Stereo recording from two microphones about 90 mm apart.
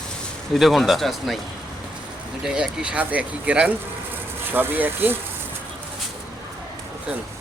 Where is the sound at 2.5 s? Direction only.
5° right (ahead or behind); by 5.2 s 20° right (ahead or behind).